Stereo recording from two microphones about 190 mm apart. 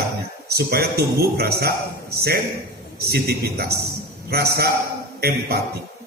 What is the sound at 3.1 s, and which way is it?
A man's voice, 55° right (ahead or behind).